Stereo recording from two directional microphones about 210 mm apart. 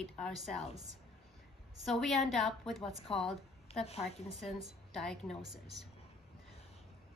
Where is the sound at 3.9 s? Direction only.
30° left (ahead or behind).